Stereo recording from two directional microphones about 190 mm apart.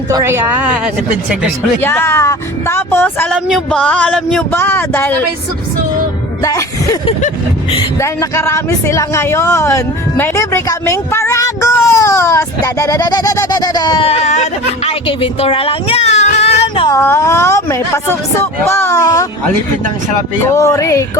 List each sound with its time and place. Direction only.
0.1 s a woman's voice: 15° right (ahead or behind)
1.8 s speech: 10° left (ahead or behind)
6.4 s speech: 15° left (ahead or behind)
16.4 s a sound: 30° left (ahead or behind)
16.9 s speech: 15° left (ahead or behind)
20.4 s speech: 15° left (ahead or behind)